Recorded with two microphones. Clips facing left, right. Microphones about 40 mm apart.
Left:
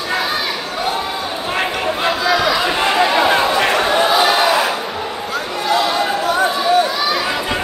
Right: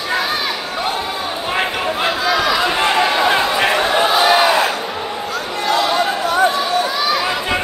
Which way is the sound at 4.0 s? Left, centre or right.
Centre.